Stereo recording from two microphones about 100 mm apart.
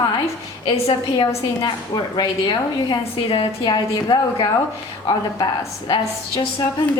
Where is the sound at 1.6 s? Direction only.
45° left (ahead or behind).